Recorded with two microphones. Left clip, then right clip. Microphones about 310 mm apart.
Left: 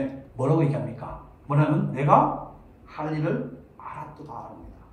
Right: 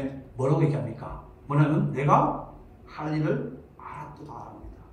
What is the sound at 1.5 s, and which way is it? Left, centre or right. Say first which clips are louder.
Speech: left 1 dB; centre.